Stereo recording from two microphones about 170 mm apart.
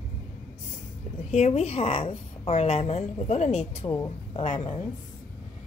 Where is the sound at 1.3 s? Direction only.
40° left (ahead or behind).